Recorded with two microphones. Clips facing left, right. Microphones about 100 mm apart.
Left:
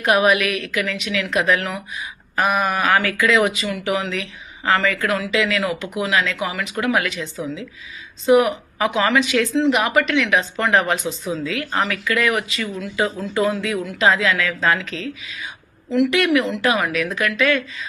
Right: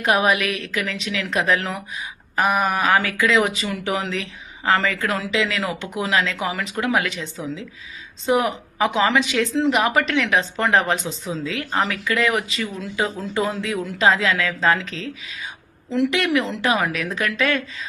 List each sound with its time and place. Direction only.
0.0 s speech: 25° right (ahead or behind)
8.3 s a woman's voice: 25° right (ahead or behind)
9.6 s speech: 35° right (ahead or behind)